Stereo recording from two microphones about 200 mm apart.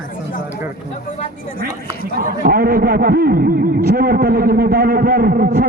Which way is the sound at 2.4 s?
50° right (ahead or behind).